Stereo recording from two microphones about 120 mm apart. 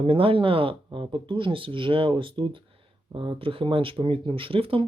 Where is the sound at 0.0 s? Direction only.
50° right (ahead or behind).